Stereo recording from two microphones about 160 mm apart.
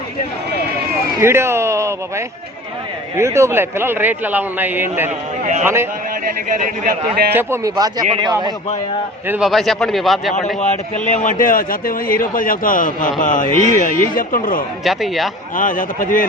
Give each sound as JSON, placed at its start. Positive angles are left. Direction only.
{"t": 1.2, "sound": "a man's voice", "side_deg": -15}
{"t": 6.6, "sound": "a man's voice", "side_deg": -70}
{"t": 7.3, "sound": "speech", "side_deg": -20}
{"t": 9.2, "sound": "a man's voice", "side_deg": -10}
{"t": 9.5, "sound": "a man's voice", "side_deg": 0}
{"t": 10.3, "sound": "a man's voice", "side_deg": 45}
{"t": 14.8, "sound": "a man's voice", "side_deg": 0}
{"t": 15.5, "sound": "a man's voice", "side_deg": 55}